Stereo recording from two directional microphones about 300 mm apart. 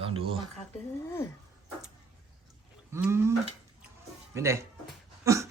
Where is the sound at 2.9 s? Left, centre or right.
Centre.